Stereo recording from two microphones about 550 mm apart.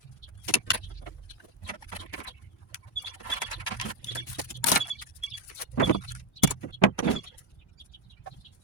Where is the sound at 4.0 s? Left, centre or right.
Left.